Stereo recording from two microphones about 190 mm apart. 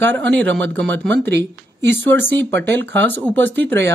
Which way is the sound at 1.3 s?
65° right (ahead or behind).